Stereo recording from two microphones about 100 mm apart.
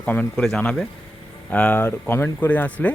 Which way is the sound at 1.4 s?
15° left (ahead or behind).